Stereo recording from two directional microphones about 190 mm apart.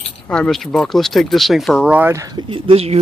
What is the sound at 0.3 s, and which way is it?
Speech, 5° left (ahead or behind).